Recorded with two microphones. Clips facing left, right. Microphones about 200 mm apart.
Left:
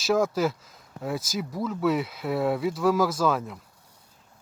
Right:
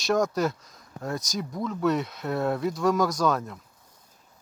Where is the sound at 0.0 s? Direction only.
5° left (ahead or behind).